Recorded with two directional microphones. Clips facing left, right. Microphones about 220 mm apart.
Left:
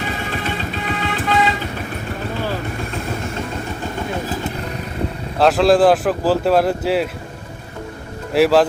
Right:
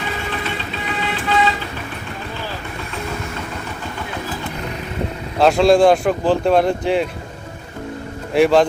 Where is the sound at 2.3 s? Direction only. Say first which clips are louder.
Left 7 dB; 50° left (ahead or behind).